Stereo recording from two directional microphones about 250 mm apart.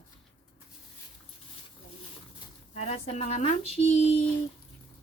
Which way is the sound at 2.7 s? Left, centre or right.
Left.